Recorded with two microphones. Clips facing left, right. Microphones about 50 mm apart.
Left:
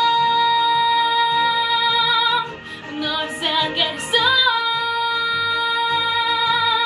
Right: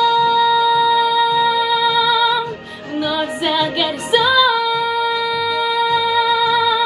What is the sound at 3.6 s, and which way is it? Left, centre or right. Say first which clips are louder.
Music: even; left.